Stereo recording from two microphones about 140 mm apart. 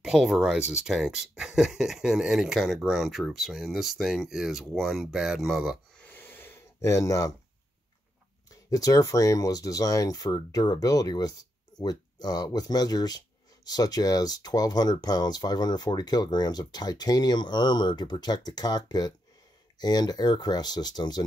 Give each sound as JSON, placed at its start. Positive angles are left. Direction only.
{"t": 0.0, "sound": "speech", "side_deg": 0}
{"t": 5.9, "sound": "a sound", "side_deg": 15}
{"t": 8.5, "sound": "speech", "side_deg": 25}